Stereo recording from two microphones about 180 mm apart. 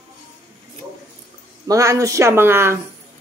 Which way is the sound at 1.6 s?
15° right (ahead or behind).